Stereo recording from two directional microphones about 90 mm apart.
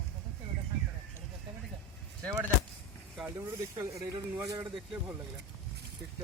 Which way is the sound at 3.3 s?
35° right (ahead or behind).